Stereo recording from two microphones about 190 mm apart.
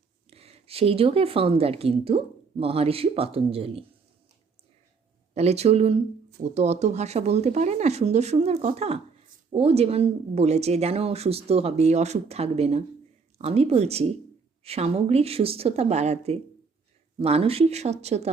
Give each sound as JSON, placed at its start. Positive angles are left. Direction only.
{"t": 0.3, "sound": "speech", "side_deg": -30}
{"t": 5.3, "sound": "speech", "side_deg": -35}